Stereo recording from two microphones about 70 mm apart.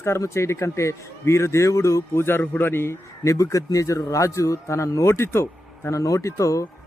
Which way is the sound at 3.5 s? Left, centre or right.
Left.